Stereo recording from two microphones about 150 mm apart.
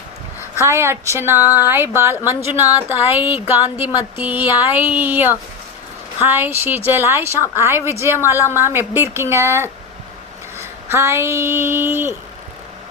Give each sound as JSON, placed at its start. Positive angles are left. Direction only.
{"t": 0.6, "sound": "speech", "side_deg": -15}
{"t": 8.3, "sound": "speech", "side_deg": 20}
{"t": 8.5, "sound": "speech", "side_deg": -15}